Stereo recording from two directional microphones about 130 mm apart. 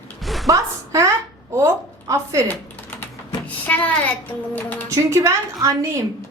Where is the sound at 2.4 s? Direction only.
15° left (ahead or behind).